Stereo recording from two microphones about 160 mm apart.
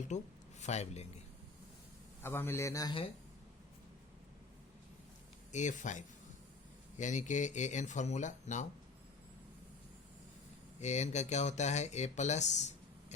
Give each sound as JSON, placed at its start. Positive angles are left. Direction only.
{"t": 0.1, "sound": "speech", "side_deg": 50}
{"t": 2.2, "sound": "a man's voice", "side_deg": 15}
{"t": 5.5, "sound": "speech", "side_deg": 50}
{"t": 10.8, "sound": "speech", "side_deg": 45}